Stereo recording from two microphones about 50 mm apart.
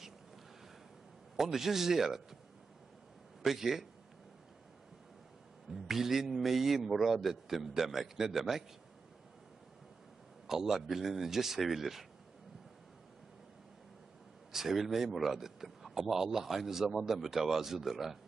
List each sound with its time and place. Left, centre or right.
1.3 s a man's voice: centre
3.4 s a man's voice: centre
5.7 s a man's voice: centre
10.4 s a man's voice: centre
14.5 s a man's voice: centre